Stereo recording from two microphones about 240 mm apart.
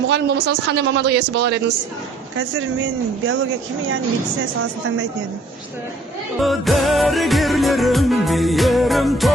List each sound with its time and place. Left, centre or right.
0.1 s speech: right
6.4 s music: centre